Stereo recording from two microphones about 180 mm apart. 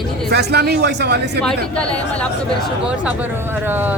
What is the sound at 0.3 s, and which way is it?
Speech, 65° right (ahead or behind).